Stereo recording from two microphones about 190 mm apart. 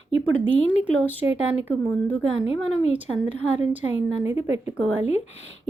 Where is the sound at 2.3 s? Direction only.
80° right.